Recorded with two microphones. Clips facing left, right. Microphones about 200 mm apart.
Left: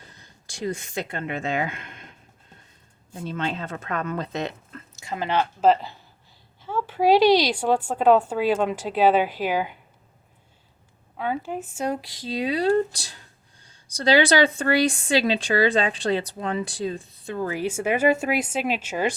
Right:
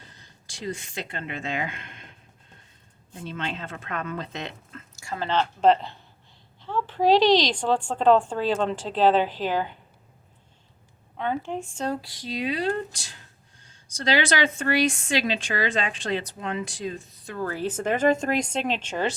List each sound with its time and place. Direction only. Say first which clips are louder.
0.5 s speech: left 4 dB; 45° left (ahead or behind)
3.2 s speech: left 4 dB; 40° left (ahead or behind)
4.9 s a woman's voice: left 1 dB; 20° left (ahead or behind)
11.2 s a woman's voice: even; 5° left (ahead or behind)
12.4 s speech: left 6 dB; 35° left (ahead or behind)
17.3 s a woman's voice: left 2 dB; 15° left (ahead or behind)